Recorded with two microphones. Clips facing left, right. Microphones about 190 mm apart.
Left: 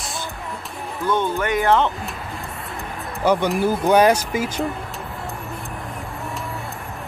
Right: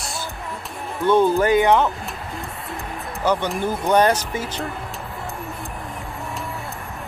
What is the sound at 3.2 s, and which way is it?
Speech, 10° left (ahead or behind).